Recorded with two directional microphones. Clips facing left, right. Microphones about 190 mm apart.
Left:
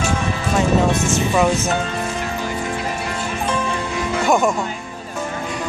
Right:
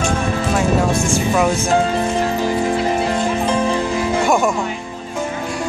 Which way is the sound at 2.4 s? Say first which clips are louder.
Right 7 dB; 30° right (ahead or behind).